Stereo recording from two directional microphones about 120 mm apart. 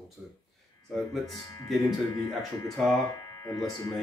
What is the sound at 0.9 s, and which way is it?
Speech, centre (ahead or behind).